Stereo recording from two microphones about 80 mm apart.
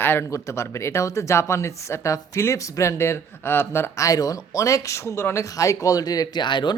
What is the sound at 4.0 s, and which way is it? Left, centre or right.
Speech, left.